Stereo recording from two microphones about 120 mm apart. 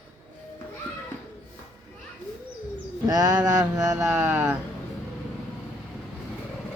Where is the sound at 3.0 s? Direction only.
30° right (ahead or behind).